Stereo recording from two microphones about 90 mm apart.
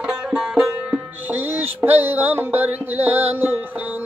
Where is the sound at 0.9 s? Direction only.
20° right (ahead or behind).